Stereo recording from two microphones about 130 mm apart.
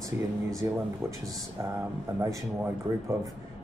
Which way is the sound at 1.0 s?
20° right (ahead or behind).